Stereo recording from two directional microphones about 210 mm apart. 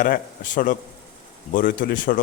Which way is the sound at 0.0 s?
40° left (ahead or behind).